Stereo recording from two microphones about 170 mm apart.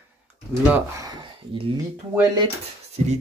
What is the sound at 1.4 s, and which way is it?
Speech, 90° right.